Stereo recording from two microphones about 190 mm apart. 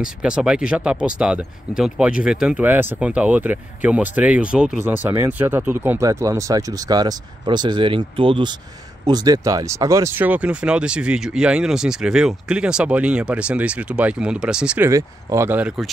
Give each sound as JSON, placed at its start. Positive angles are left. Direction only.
{"t": 0.0, "sound": "speech", "side_deg": -5}
{"t": 14.9, "sound": "speech", "side_deg": -15}